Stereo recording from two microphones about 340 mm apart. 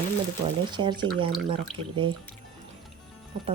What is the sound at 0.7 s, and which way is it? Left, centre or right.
Speech, centre.